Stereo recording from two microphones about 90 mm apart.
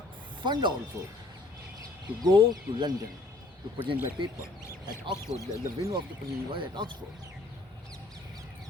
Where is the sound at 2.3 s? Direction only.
55° right (ahead or behind).